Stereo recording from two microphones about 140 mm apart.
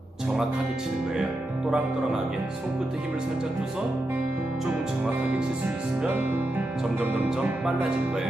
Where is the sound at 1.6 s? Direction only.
5° right (ahead or behind).